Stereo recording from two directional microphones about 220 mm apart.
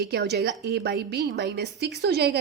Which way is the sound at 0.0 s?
50° right (ahead or behind).